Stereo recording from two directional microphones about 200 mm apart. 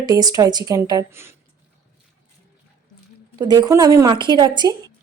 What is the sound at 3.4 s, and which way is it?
A woman's voice, 20° right (ahead or behind).